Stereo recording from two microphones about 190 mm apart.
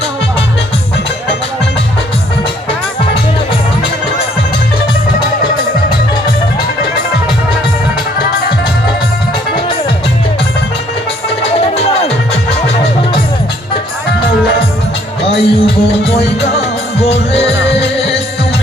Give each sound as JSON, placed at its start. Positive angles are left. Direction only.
{"t": 11.4, "sound": "music", "side_deg": 30}
{"t": 15.2, "sound": "music", "side_deg": 30}